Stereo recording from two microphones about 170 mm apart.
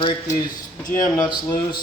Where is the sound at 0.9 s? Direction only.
25° left (ahead or behind).